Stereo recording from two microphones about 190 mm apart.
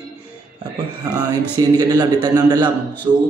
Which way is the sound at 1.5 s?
20° right (ahead or behind).